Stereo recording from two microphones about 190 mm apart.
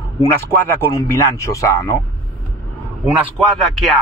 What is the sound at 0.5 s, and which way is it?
Speech, 10° left (ahead or behind).